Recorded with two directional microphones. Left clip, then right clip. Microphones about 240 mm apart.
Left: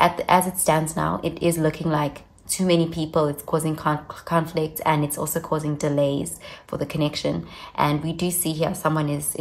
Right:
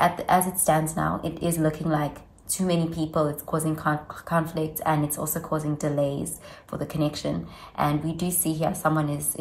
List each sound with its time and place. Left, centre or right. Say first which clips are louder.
0.0 s a woman's voice: left 3 dB; left